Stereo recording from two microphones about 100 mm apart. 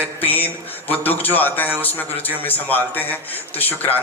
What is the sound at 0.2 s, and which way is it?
Speech, 20° left (ahead or behind).